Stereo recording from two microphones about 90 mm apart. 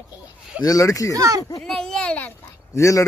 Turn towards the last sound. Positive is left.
turn(degrees=35)  # may be behind; listen again after turning